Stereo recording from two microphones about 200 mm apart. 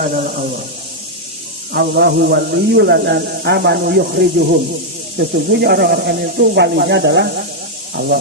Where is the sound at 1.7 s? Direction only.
55° right (ahead or behind).